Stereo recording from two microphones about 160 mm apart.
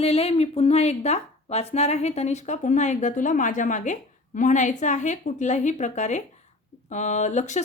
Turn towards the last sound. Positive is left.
turn(degrees=50)  # may be behind; listen again after turning